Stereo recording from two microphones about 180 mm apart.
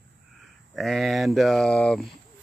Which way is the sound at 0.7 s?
Centre (ahead or behind).